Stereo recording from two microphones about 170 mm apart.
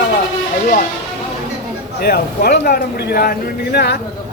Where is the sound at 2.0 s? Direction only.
65° left (ahead or behind).